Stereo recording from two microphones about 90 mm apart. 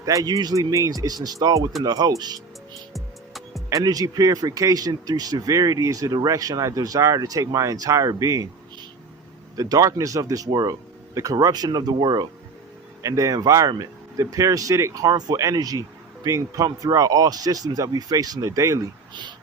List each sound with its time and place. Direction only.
0.0 s speech: 40° right (ahead or behind)
2.9 s music: centre (ahead or behind)
3.7 s speech: 40° right (ahead or behind)
9.6 s speech: 40° right (ahead or behind)
13.0 s speech: 35° right (ahead or behind)